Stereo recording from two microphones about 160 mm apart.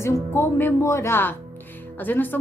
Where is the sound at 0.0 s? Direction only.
15° left (ahead or behind).